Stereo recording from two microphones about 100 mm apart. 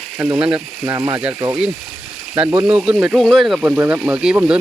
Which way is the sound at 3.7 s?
20° right (ahead or behind).